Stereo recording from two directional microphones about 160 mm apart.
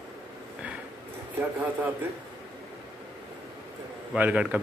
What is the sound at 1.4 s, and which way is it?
Speech, 10° right (ahead or behind).